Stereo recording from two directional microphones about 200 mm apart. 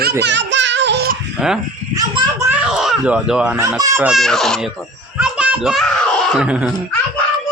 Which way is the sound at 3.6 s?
15° right (ahead or behind).